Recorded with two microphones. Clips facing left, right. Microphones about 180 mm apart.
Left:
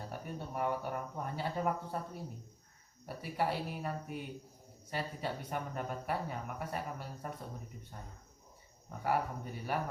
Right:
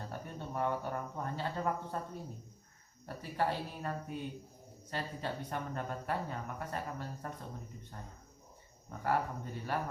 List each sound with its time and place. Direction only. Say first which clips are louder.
0.0 s speech: left 1 dB; 10° left (ahead or behind)
9.0 s speech: even; 10° left (ahead or behind)